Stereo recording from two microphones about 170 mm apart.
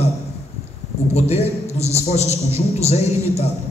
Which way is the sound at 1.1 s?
40° left (ahead or behind).